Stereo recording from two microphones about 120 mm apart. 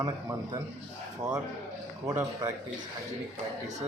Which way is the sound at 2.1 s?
30° right (ahead or behind).